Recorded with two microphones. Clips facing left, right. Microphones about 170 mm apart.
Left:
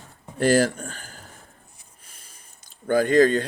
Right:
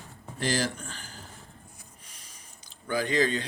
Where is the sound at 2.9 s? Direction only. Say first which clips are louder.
Left 9 dB; 50° left (ahead or behind).